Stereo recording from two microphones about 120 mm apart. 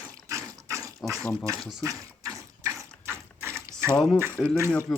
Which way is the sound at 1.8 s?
30° right (ahead or behind).